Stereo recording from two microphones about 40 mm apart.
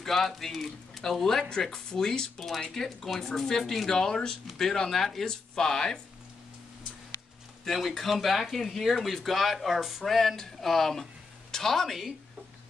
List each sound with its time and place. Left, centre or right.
0.0 s speech: centre
7.6 s speech: centre